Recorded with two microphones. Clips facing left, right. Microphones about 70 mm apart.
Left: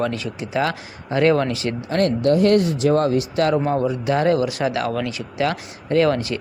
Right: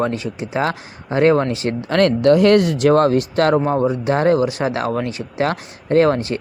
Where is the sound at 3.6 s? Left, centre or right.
Right.